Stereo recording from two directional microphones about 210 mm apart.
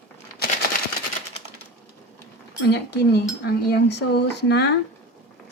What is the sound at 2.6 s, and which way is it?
A woman's voice, 55° left (ahead or behind).